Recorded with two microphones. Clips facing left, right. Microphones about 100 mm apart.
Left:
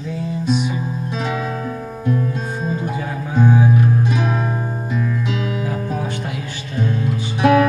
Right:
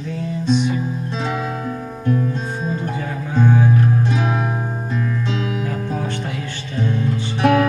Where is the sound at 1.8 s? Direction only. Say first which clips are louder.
Right 1 dB; 5° left (ahead or behind).